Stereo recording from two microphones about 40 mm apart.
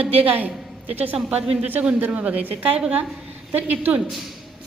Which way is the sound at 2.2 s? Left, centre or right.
Right.